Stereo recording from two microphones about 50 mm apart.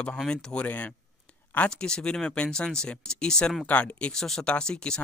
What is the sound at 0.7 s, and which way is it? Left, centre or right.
Speech, left.